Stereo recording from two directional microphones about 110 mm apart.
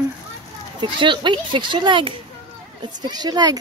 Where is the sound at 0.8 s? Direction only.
45° right (ahead or behind).